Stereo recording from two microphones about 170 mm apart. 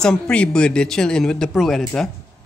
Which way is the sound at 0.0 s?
5° left (ahead or behind).